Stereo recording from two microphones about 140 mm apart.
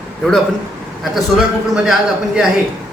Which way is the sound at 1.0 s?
Centre (ahead or behind).